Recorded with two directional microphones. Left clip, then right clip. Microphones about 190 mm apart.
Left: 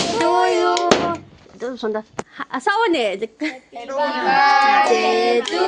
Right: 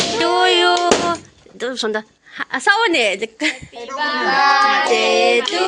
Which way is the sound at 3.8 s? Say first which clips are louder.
Even; 40° left (ahead or behind).